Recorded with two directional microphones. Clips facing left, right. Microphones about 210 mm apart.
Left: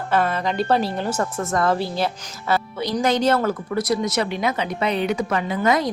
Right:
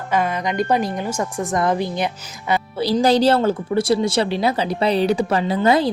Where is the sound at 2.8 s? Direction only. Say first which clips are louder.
Right 7 dB; 30° right (ahead or behind).